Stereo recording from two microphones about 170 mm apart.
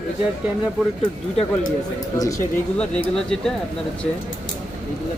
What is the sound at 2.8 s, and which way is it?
Speech, 5° left (ahead or behind).